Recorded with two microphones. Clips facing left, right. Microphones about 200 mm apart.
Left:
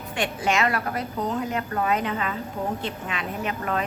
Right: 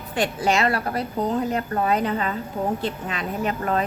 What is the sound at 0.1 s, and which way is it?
A woman's voice, 35° right (ahead or behind).